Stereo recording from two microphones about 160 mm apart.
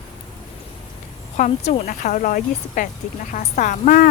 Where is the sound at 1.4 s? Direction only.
45° left (ahead or behind).